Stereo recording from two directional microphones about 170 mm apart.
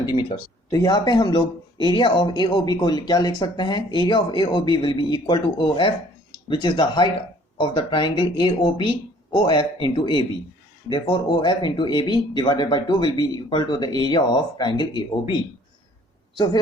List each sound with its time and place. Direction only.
0.0 s speech: 30° left (ahead or behind)